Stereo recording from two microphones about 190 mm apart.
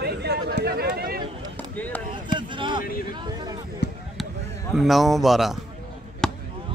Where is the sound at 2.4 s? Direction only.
25° right (ahead or behind).